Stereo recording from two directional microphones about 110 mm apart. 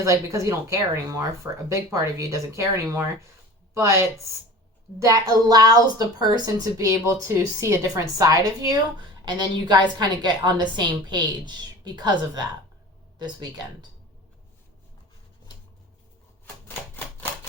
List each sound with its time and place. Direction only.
0.0 s a woman's voice: 30° right (ahead or behind)